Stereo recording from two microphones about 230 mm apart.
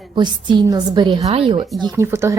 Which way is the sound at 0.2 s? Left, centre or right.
Centre.